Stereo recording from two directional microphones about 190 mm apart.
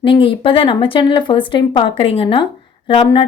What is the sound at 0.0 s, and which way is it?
A woman's voice, 25° left (ahead or behind).